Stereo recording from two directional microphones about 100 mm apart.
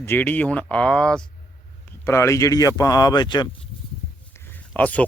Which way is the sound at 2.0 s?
30° left (ahead or behind).